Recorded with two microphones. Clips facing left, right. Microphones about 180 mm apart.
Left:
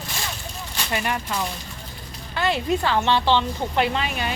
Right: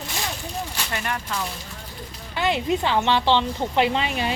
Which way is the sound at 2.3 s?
15° right (ahead or behind).